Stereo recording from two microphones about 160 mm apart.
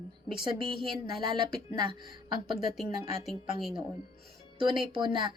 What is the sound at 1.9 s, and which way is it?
Speech, 30° right (ahead or behind).